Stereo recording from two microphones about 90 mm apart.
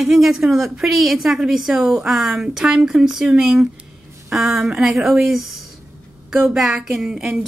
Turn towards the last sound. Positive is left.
turn(degrees=-10)  # may be behind; listen again after turning